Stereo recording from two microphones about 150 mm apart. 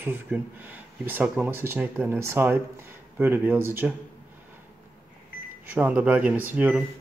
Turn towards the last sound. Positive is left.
turn(degrees=-10)  # may be behind; listen again after turning